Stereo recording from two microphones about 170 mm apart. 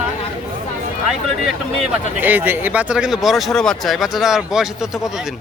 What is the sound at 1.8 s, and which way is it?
Speech, 10° right (ahead or behind).